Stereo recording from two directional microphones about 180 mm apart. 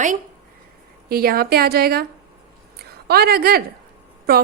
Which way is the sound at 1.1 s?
55° right (ahead or behind).